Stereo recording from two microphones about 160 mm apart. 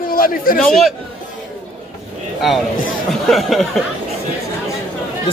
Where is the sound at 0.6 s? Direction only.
Centre (ahead or behind).